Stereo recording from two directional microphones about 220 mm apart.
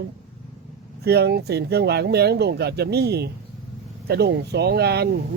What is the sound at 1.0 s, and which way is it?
Speech, 45° right (ahead or behind).